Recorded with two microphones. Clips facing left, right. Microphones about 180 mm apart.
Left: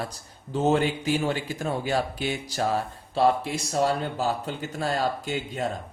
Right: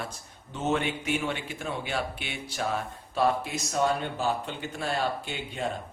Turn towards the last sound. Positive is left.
turn(degrees=45)  # may be behind; listen again after turning